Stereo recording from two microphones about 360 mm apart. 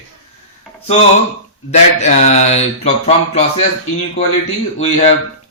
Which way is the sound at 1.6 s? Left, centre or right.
Centre.